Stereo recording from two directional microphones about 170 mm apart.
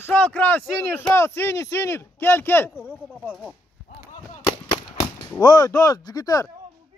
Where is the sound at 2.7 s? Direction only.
5° right (ahead or behind).